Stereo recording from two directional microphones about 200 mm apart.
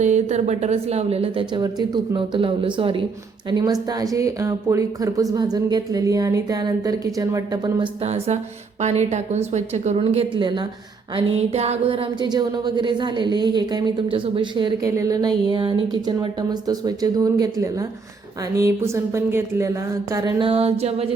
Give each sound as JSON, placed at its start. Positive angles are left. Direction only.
{"t": 0.0, "sound": "a woman's voice", "side_deg": -35}
{"t": 8.0, "sound": "a woman's voice", "side_deg": -30}